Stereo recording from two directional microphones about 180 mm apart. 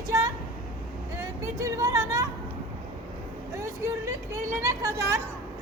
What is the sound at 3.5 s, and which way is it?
Vehicle, 15° right (ahead or behind).